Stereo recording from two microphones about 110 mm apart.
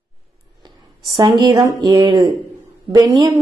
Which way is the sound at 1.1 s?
40° right (ahead or behind).